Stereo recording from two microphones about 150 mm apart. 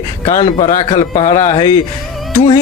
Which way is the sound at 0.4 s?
50° left (ahead or behind).